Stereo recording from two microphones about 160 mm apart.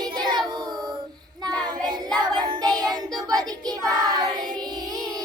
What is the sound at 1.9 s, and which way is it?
Music, 25° right (ahead or behind).